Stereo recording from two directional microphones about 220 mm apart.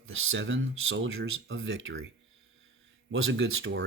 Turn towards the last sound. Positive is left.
turn(degrees=-55)  # may be behind; listen again after turning